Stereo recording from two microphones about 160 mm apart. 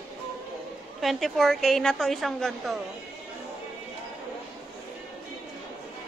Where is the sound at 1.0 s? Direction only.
Centre (ahead or behind).